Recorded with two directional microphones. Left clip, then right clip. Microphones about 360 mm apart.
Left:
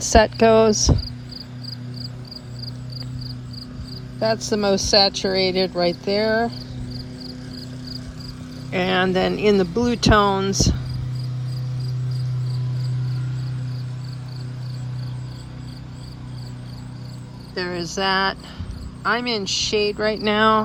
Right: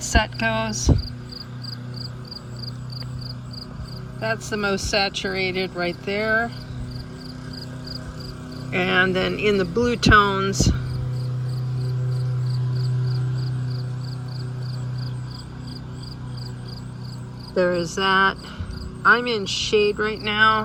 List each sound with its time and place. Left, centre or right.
0.1 s speech: left
0.6 s speech: centre
4.4 s speech: centre
8.7 s speech: centre
17.5 s cricket: centre
20.1 s speech: centre